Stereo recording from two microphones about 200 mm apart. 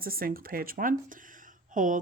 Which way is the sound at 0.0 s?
45° right (ahead or behind).